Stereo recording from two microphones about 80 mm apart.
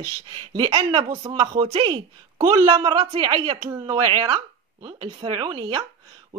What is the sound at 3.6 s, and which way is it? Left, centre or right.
Speech, right.